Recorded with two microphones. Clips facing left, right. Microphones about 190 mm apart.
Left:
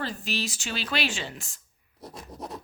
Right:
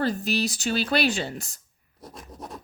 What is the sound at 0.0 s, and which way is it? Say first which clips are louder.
Speech: right 7 dB; 40° right (ahead or behind).